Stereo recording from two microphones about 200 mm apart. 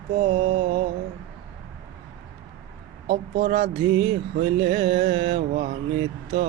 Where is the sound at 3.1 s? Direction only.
55° right (ahead or behind).